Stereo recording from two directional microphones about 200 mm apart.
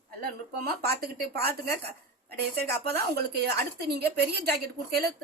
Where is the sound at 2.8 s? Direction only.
55° right (ahead or behind).